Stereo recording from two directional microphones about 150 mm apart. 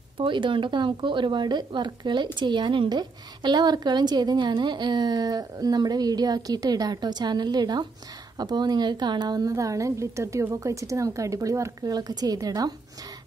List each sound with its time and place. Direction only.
0.2 s a woman's voice: 35° right (ahead or behind)